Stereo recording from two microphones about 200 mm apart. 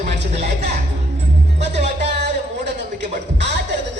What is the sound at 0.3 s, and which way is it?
Music, 35° right (ahead or behind).